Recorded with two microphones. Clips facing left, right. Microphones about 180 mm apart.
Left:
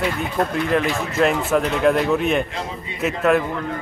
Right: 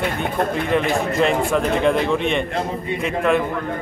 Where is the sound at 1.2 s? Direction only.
5° left (ahead or behind).